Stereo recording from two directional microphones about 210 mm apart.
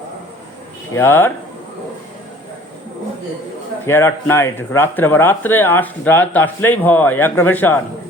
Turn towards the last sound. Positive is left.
turn(degrees=10)  # may be behind; listen again after turning